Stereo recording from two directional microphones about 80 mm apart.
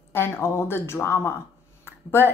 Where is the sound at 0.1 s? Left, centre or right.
Left.